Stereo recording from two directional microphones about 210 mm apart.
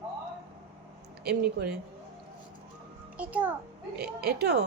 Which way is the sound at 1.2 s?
50° right (ahead or behind).